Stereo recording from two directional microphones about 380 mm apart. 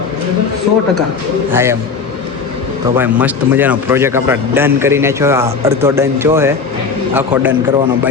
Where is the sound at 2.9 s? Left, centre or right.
Centre.